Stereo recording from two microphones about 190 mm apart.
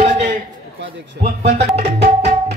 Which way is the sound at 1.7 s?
35° right (ahead or behind).